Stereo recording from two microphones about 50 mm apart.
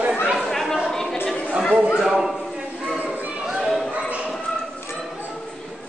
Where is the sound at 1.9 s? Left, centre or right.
Centre.